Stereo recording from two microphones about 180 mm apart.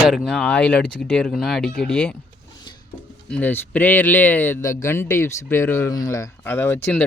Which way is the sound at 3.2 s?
10° left (ahead or behind).